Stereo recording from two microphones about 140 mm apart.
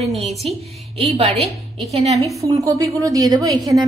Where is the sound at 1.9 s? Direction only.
50° right (ahead or behind).